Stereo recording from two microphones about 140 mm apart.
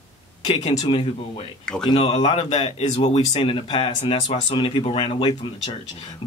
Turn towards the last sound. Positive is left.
turn(degrees=35)  # may be behind; listen again after turning